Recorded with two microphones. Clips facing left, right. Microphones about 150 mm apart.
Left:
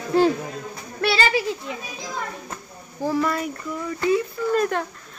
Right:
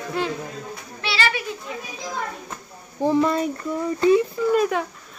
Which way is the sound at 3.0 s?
20° right (ahead or behind).